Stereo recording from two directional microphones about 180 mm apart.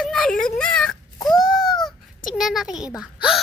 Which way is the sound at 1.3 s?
Centre (ahead or behind).